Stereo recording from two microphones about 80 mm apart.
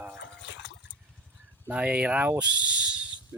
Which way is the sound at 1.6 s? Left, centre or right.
Centre.